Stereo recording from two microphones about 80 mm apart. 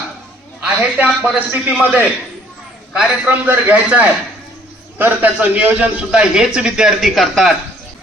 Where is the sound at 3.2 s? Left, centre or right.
Right; by 7.5 s centre.